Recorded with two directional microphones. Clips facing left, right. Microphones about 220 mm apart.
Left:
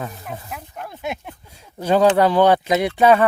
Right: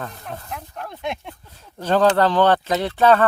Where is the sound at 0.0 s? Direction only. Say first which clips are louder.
Left 2 dB; 5° left (ahead or behind).